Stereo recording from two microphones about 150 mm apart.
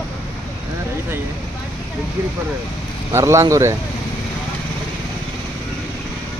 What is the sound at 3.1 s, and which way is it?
Speech, 20° right (ahead or behind).